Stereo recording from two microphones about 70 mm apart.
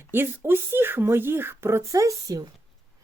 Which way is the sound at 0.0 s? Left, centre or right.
Right.